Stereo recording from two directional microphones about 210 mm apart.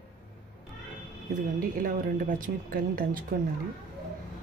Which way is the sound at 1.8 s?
40° right (ahead or behind).